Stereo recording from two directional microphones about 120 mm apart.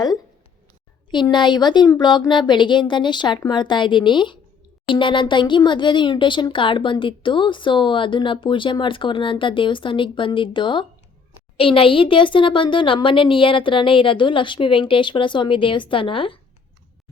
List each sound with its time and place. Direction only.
1.1 s speech: 40° left (ahead or behind)